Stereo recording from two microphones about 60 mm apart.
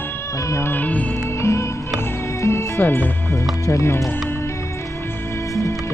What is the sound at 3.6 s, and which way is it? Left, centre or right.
Speech, left.